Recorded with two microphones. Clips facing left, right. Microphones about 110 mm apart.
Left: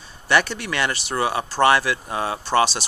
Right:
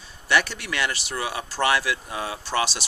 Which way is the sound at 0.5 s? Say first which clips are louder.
Left 3 dB; 5° right (ahead or behind).